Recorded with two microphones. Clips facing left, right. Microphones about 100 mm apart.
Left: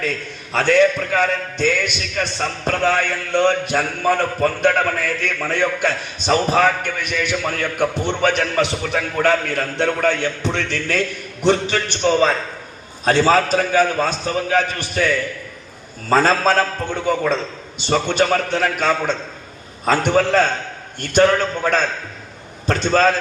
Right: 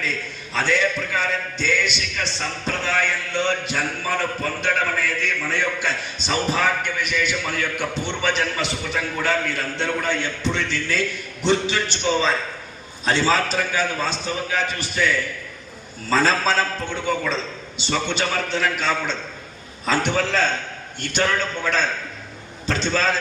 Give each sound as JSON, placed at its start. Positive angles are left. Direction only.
{"t": 0.5, "sound": "a man's voice", "side_deg": 55}
{"t": 16.0, "sound": "a man's voice", "side_deg": 45}